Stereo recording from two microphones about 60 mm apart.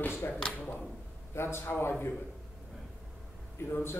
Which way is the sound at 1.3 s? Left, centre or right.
Left.